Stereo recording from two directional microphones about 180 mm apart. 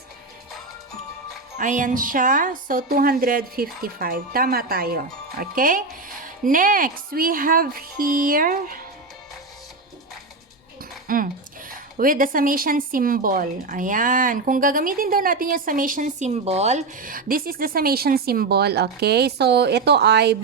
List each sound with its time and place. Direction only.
1.5 s speech: 45° right (ahead or behind)
11.1 s a sound: 50° right (ahead or behind)
11.9 s speech: 50° right (ahead or behind); by 20.3 s 65° right (ahead or behind)